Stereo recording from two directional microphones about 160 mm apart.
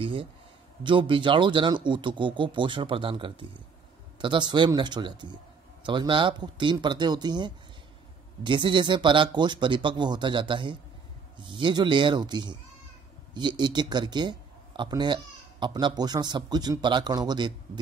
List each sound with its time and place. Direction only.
0.0 s a man's voice: 35° right (ahead or behind)